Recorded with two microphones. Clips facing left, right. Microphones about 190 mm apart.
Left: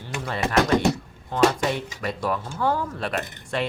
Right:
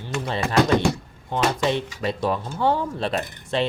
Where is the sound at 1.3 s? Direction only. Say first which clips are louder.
Left 1 dB; 25° right (ahead or behind).